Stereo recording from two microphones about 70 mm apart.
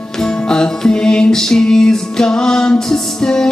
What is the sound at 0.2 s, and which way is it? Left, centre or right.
Music, centre.